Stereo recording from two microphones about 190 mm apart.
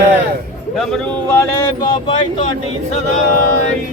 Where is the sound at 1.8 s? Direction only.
25° left (ahead or behind).